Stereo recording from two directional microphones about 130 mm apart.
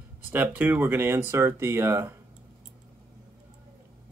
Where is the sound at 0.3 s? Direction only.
15° right (ahead or behind).